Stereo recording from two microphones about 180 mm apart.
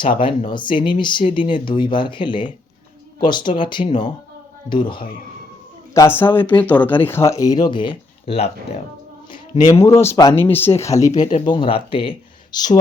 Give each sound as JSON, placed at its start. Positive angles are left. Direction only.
{"t": 0.2, "sound": "speech", "side_deg": 25}
{"t": 5.9, "sound": "speech", "side_deg": 15}
{"t": 9.7, "sound": "speech", "side_deg": 15}